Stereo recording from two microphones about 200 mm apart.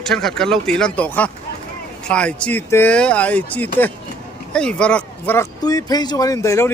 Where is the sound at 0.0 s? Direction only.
Centre (ahead or behind).